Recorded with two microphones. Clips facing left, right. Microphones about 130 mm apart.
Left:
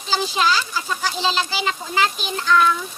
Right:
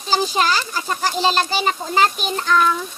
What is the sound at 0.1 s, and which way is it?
Speech, 45° right (ahead or behind).